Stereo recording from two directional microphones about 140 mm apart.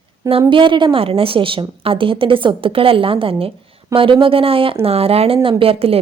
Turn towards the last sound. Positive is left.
turn(degrees=-45)  # may be behind; listen again after turning